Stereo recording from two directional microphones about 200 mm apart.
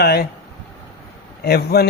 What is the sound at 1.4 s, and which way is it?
Speech, 50° left (ahead or behind).